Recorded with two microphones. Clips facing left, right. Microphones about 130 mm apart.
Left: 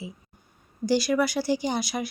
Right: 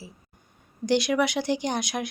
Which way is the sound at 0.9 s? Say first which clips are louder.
Even; 5° left (ahead or behind).